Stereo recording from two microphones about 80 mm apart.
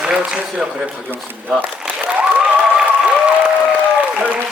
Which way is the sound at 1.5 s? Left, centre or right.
Centre.